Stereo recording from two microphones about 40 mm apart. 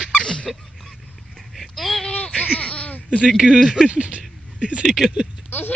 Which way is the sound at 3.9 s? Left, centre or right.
Right.